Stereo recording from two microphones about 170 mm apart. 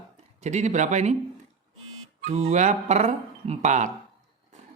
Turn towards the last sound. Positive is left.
turn(degrees=-45)  # may be behind; listen again after turning